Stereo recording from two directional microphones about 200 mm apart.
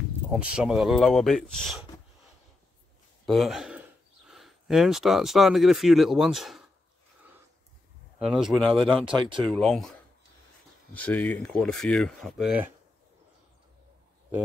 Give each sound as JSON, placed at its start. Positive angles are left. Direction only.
{"t": 0.3, "sound": "speech", "side_deg": -5}
{"t": 3.3, "sound": "speech", "side_deg": 0}
{"t": 8.2, "sound": "speech", "side_deg": -5}
{"t": 8.9, "sound": "speech", "side_deg": -25}
{"t": 9.5, "sound": "speech", "side_deg": 0}
{"t": 10.9, "sound": "speech", "side_deg": 5}